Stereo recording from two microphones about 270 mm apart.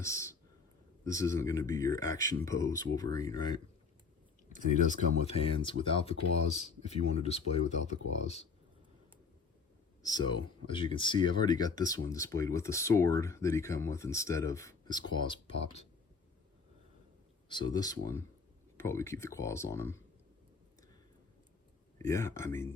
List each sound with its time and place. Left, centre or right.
0.0 s speech: centre
4.5 s speech: left
10.0 s speech: centre
17.5 s speech: centre
21.9 s speech: centre